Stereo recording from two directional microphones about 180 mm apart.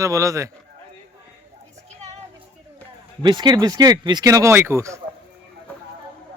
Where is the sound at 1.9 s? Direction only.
40° right (ahead or behind).